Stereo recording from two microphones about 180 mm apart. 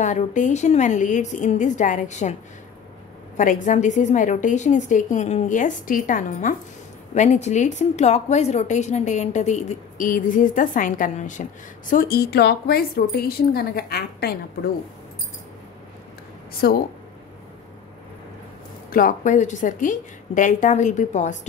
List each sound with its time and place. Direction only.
0.0 s a woman's voice: 45° left (ahead or behind)
3.3 s a woman's voice: 45° left (ahead or behind)
11.9 s speech: 55° left (ahead or behind)
16.6 s speech: 60° left (ahead or behind)
18.9 s a woman's voice: 50° left (ahead or behind)